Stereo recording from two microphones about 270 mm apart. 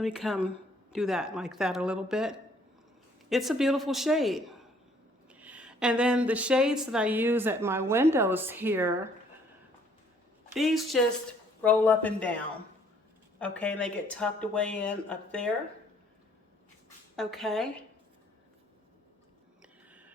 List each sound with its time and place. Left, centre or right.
0.0 s a woman's voice: centre
10.5 s speech: centre
13.4 s speech: centre
17.2 s speech: centre